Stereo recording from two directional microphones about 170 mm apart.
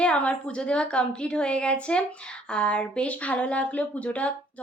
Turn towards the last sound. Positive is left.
turn(degrees=10)  # may be behind; listen again after turning